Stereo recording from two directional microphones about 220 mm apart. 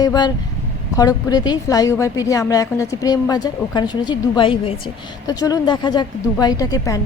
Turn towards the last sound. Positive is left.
turn(degrees=15)  # may be behind; listen again after turning